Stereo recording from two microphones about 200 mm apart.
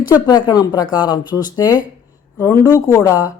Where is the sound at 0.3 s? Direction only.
20° left (ahead or behind).